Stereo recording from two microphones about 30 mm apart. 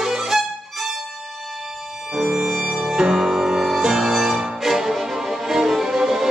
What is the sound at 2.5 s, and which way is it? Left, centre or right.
Music, centre.